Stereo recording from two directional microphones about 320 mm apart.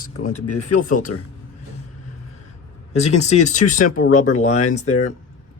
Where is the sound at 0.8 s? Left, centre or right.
Left.